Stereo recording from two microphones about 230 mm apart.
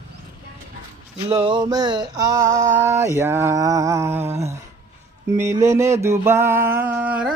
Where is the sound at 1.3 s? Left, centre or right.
Right.